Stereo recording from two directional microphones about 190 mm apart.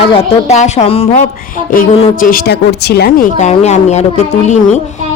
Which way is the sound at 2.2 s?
50° left (ahead or behind).